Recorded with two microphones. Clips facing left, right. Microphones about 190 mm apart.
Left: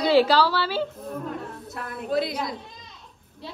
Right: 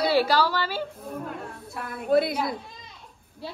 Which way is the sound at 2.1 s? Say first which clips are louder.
Right 4 dB; 55° right (ahead or behind).